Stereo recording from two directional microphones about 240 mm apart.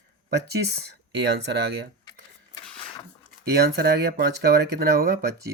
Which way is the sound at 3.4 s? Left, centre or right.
Right.